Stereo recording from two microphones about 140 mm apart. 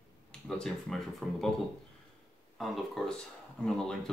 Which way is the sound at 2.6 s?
Centre (ahead or behind).